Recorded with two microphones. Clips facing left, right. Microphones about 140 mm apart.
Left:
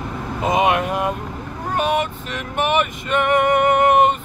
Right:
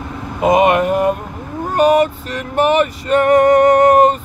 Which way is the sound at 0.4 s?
50° right (ahead or behind).